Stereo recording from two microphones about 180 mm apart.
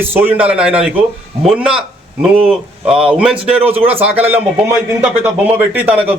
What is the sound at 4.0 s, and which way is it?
Speech, 30° right (ahead or behind).